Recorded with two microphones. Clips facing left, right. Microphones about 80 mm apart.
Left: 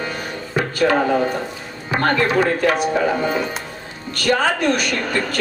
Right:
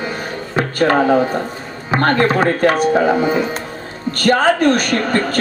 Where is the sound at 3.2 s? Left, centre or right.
Centre.